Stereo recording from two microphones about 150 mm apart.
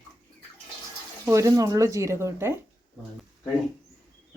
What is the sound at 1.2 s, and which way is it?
Speech, 20° right (ahead or behind).